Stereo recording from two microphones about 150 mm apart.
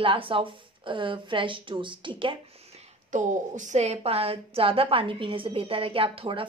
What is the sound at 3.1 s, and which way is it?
A woman's voice, 55° right (ahead or behind).